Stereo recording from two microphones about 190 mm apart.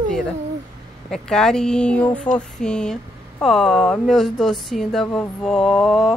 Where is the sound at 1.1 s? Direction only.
Centre (ahead or behind).